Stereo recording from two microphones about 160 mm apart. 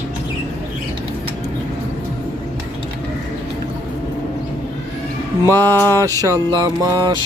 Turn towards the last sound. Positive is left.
turn(degrees=-25)  # may be behind; listen again after turning